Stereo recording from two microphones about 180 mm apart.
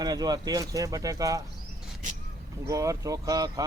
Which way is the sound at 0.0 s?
20° right (ahead or behind).